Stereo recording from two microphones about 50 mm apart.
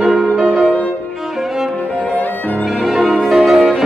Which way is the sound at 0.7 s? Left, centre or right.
Left.